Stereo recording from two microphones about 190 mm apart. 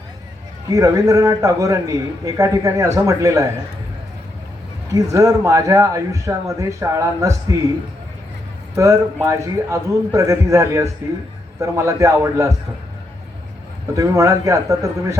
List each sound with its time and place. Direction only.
0.7 s a man's voice: 20° right (ahead or behind)
4.9 s a man's voice: 15° right (ahead or behind)
8.7 s a man's voice: 15° right (ahead or behind)
13.9 s a man's voice: 15° right (ahead or behind)